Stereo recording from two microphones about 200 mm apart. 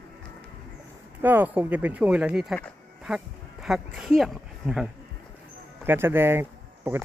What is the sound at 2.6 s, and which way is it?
Insect, centre (ahead or behind).